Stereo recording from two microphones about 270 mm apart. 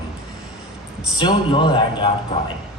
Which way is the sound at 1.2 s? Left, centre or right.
Centre.